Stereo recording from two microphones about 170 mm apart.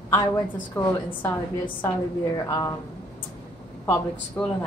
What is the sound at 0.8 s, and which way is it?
Speech, 15° left (ahead or behind).